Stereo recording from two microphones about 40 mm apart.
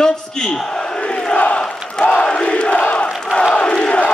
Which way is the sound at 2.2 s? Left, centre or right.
Left.